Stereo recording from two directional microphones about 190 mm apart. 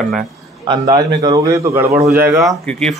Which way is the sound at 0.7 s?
20° right (ahead or behind).